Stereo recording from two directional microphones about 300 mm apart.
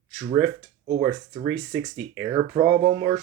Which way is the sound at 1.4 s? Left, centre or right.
Centre.